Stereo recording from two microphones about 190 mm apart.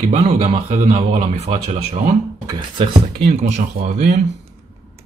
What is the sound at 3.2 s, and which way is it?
Speech, 35° right (ahead or behind).